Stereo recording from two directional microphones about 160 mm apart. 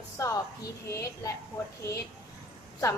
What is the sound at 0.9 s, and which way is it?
Speech, 20° left (ahead or behind).